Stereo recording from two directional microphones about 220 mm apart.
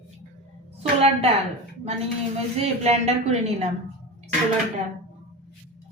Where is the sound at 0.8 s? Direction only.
30° right (ahead or behind).